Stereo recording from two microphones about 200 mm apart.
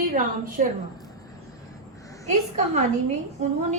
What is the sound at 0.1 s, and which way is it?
Speech, 45° right (ahead or behind).